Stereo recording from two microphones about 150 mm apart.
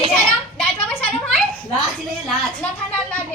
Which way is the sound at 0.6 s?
10° left (ahead or behind).